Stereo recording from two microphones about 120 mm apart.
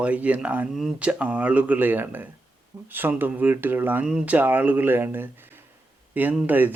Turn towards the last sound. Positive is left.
turn(degrees=-15)  # may be behind; listen again after turning